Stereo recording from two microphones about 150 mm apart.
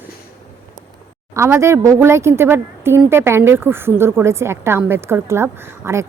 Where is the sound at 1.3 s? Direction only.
20° right (ahead or behind).